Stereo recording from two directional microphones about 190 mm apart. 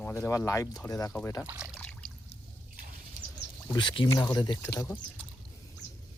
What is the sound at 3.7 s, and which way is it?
Speech, 25° left (ahead or behind).